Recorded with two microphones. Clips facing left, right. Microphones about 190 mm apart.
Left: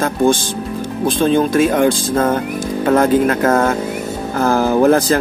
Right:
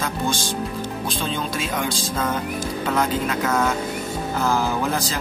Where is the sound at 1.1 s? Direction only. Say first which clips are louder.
Left 16 dB; 55° left (ahead or behind).